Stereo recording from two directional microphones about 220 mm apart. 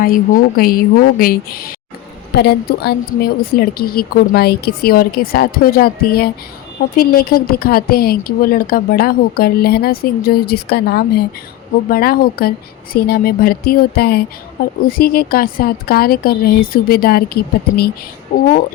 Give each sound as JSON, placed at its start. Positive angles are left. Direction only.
{"t": 0.0, "sound": "a woman's voice", "side_deg": 40}